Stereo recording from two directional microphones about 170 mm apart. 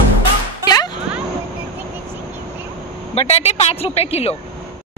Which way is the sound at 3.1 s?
40° left (ahead or behind).